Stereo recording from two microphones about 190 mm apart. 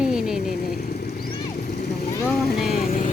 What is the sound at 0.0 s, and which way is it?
Vehicle, 5° right (ahead or behind).